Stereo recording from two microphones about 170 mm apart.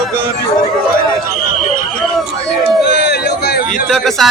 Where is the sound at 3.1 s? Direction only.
70° left (ahead or behind).